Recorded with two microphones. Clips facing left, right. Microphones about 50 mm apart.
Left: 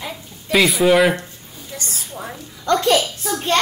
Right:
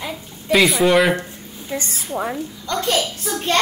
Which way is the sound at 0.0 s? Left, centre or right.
Centre.